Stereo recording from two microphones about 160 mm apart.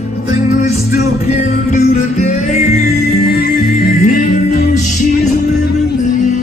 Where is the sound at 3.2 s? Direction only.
80° left.